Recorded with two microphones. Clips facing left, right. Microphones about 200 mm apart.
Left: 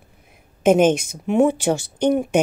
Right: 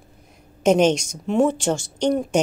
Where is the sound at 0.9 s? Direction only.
55° left (ahead or behind).